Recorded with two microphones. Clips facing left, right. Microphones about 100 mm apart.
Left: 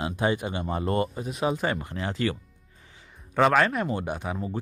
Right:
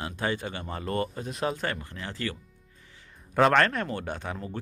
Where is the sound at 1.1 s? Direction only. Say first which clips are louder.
Left 3 dB; 5° left (ahead or behind).